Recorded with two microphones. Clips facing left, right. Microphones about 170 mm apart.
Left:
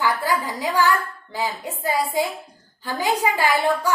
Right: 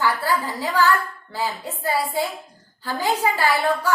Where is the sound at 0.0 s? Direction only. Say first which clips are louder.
Even; 15° left (ahead or behind).